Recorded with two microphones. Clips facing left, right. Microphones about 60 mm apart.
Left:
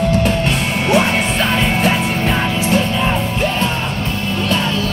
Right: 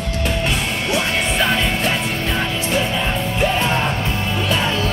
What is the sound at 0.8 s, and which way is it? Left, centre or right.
Music, left.